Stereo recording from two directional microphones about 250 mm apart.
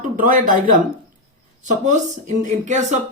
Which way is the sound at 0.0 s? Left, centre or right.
Right.